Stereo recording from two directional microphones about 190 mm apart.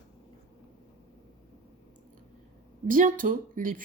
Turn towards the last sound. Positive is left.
turn(degrees=-45)  # may be behind; listen again after turning